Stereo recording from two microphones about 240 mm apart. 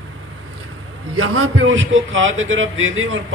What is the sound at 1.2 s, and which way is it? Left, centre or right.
Speech, right.